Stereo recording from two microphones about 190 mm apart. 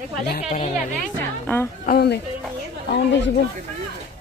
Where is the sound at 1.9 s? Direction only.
55° left (ahead or behind).